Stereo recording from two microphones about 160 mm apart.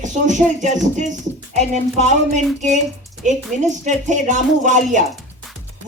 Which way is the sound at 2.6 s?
50° right (ahead or behind).